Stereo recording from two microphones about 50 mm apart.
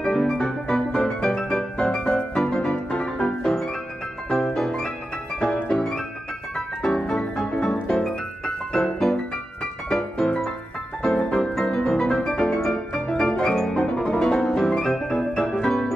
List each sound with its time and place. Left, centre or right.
0.0 s music: centre
8.7 s music: centre
11.3 s piano: centre
11.8 s music: centre